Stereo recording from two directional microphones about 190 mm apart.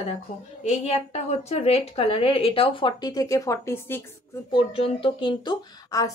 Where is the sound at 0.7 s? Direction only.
35° left (ahead or behind); by 4.0 s 15° left (ahead or behind).